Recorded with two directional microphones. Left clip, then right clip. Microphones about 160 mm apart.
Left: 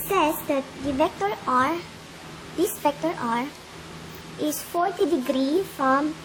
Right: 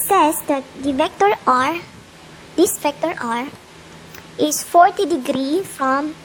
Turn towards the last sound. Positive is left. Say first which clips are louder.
# right 3 dB
turn(degrees=-40)  # may be behind; listen again after turning